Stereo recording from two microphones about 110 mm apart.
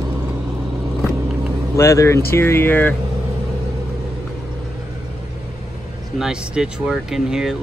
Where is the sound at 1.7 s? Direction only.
30° left (ahead or behind).